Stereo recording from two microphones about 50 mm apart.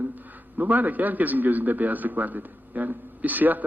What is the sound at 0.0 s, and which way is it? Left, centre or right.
A man's voice, right.